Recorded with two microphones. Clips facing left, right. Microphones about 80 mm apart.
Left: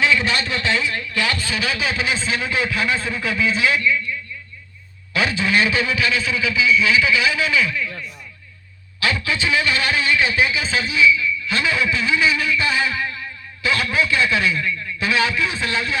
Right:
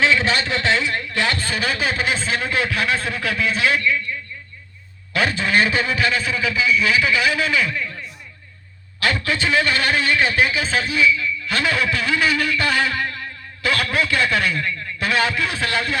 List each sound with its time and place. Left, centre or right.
0.0 s a sound: right
0.9 s a man's voice: right
9.0 s a man's voice: right